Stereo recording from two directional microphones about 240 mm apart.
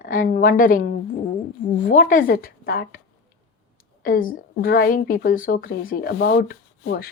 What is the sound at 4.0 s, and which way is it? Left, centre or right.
Speech, left.